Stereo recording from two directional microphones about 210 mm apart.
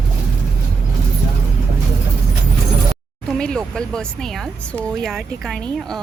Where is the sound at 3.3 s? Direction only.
5° left (ahead or behind).